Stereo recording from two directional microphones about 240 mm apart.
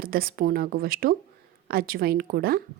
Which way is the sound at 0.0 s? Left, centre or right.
Right.